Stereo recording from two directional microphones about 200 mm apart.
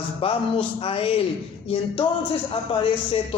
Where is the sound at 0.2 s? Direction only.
30° left (ahead or behind).